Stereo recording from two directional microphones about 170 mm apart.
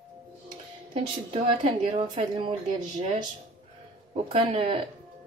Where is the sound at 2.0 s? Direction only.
30° right (ahead or behind).